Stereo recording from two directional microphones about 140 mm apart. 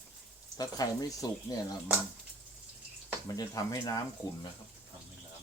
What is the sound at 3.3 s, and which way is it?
Speech, 25° left (ahead or behind).